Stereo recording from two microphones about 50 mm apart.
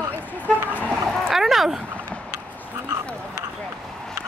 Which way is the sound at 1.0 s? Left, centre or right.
Centre.